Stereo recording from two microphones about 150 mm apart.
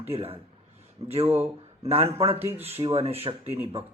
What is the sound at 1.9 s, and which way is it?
A man's voice, 40° right (ahead or behind).